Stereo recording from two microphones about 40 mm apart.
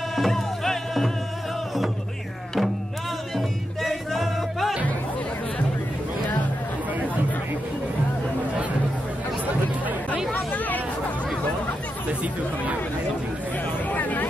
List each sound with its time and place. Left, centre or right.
0.1 s music: centre
3.3 s music: centre
10.3 s hubbub: left
13.8 s a sound: left